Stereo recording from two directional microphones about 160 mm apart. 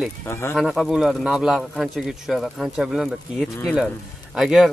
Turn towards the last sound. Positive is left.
turn(degrees=0)  # may be behind; listen again after turning